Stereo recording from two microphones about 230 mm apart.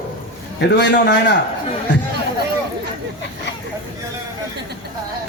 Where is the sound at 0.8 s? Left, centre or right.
Left.